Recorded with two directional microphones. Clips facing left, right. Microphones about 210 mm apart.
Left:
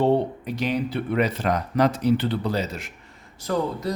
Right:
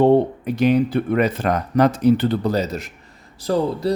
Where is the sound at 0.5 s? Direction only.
50° right (ahead or behind).